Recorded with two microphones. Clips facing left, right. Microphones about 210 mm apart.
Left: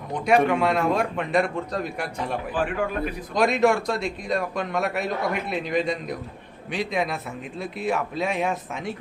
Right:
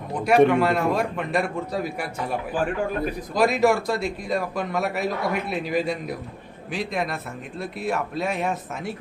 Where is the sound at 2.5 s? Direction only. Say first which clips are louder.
Right 1 dB; 45° right (ahead or behind).